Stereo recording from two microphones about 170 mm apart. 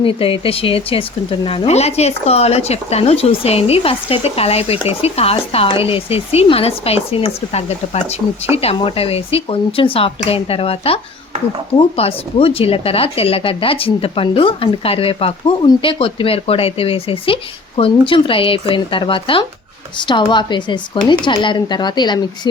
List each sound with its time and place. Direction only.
0.0 s speech: 30° left (ahead or behind)